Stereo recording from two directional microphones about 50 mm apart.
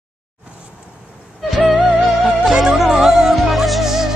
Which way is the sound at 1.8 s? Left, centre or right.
Centre.